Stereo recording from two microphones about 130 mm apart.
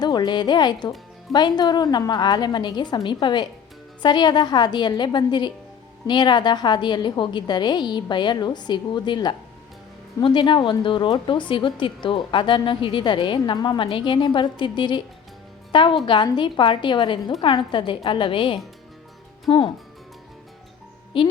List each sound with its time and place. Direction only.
0.0 s a woman's voice: 35° left (ahead or behind)
21.1 s a woman's voice: 40° left (ahead or behind)